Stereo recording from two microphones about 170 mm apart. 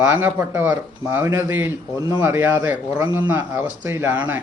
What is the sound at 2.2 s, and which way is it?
Speech, 15° right (ahead or behind).